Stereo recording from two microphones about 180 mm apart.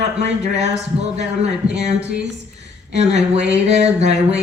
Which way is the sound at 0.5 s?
35° right (ahead or behind).